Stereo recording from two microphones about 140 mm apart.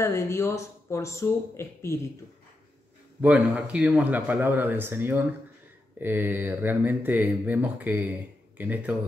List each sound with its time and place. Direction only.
0.0 s speech: 20° left (ahead or behind)
3.2 s speech: 10° right (ahead or behind)